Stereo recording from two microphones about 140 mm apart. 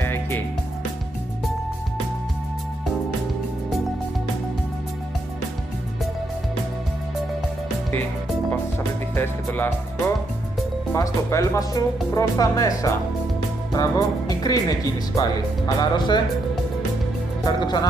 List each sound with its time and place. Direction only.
0.0 s music: 15° left (ahead or behind)
9.1 s speech: 15° left (ahead or behind)
13.7 s music: 25° left (ahead or behind)
15.1 s speech: 30° left (ahead or behind)
17.5 s speech: 30° left (ahead or behind)